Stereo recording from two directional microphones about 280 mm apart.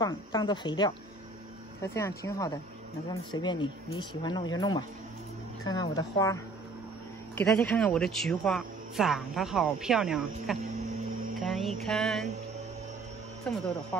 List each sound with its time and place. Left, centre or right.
0.0 s speech: centre
13.5 s speech: centre